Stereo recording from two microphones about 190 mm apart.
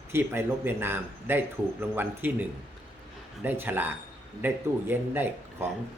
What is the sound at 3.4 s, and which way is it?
A man's voice, 10° right (ahead or behind).